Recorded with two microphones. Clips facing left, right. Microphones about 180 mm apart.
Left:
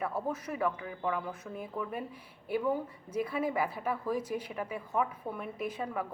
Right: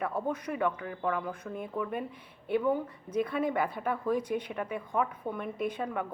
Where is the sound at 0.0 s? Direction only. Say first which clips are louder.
Right 2 dB; 5° left (ahead or behind).